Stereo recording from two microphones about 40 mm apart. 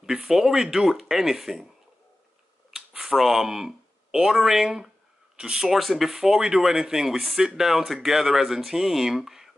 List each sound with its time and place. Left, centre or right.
0.0 s speech: centre
2.7 s speech: centre
5.7 s speech: centre